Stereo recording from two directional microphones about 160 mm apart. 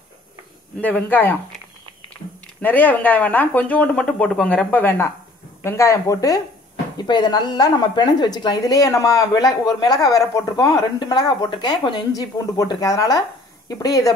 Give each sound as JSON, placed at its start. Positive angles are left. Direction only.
{"t": 0.7, "sound": "speech", "side_deg": 10}
{"t": 2.6, "sound": "speech", "side_deg": 10}